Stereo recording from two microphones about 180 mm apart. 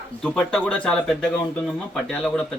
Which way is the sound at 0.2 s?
5° left (ahead or behind).